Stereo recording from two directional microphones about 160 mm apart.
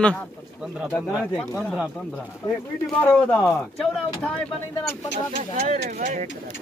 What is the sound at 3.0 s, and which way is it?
Speech, 10° left (ahead or behind).